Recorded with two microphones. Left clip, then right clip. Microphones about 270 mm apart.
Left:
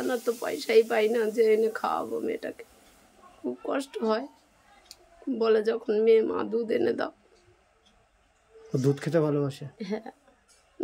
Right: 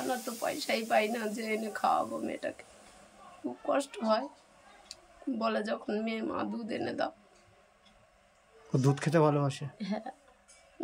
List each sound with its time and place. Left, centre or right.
0.2 s speech: centre
3.6 s speech: centre
5.4 s speech: centre
8.7 s speech: centre